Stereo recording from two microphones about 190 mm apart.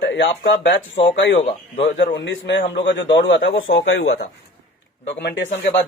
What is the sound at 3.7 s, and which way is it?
Speech, 90° left.